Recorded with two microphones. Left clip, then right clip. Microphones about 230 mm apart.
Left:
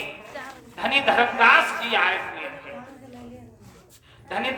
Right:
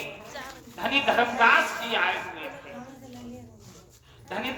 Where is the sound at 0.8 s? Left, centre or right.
Left.